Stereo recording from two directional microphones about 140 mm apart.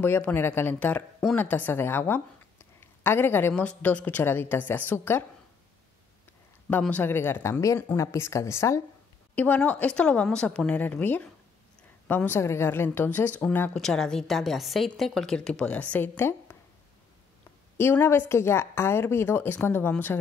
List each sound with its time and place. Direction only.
0.0 s a woman's voice: 15° left (ahead or behind)
6.7 s a woman's voice: 10° left (ahead or behind)
17.7 s a woman's voice: 15° left (ahead or behind)